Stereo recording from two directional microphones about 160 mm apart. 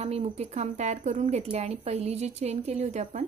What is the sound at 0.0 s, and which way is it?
Speech, 45° right (ahead or behind).